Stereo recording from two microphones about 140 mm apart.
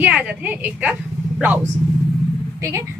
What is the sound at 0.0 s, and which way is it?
Speech, 10° right (ahead or behind).